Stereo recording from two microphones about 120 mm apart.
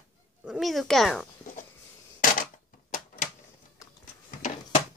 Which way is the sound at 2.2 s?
90° left.